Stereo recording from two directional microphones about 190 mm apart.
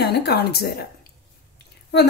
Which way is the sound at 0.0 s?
60° left (ahead or behind).